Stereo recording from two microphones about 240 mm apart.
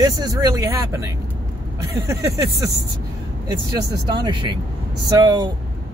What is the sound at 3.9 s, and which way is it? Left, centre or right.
Speech, centre.